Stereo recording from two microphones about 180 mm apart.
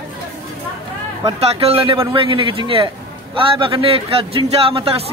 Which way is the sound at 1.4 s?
30° right (ahead or behind).